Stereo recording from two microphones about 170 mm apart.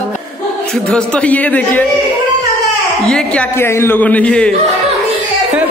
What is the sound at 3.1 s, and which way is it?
A man's voice, 5° left (ahead or behind).